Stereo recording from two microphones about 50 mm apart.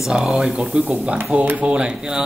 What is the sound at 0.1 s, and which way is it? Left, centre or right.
Speech, centre.